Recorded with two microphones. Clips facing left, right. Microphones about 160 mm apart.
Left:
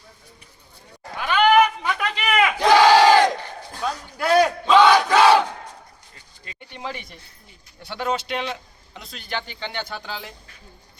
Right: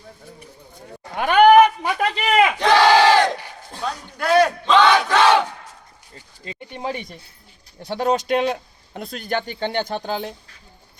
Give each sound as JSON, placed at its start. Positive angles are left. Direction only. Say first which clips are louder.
{"t": 1.2, "sound": "sheep", "louder": "right 5 dB", "side_deg": -55}
{"t": 2.6, "sound": "battle cry", "louder": "left 3 dB", "side_deg": 10}
{"t": 6.7, "sound": "keys jangling", "louder": "right 5 dB", "side_deg": -40}
{"t": 7.8, "sound": "speech", "louder": "right 5 dB", "side_deg": -40}